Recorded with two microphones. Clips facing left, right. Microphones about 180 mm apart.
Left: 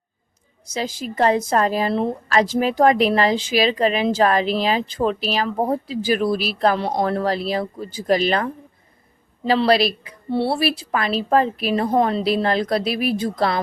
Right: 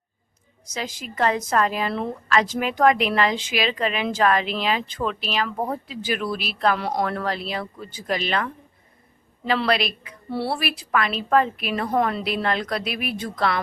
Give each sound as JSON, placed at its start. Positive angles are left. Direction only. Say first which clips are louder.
{"t": 0.7, "sound": "a woman's voice", "louder": "left 6 dB", "side_deg": 30}